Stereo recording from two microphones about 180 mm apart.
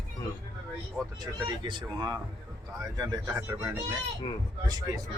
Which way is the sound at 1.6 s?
25° right (ahead or behind).